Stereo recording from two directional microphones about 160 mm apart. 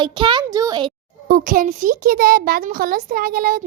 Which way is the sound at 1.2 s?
60° right (ahead or behind).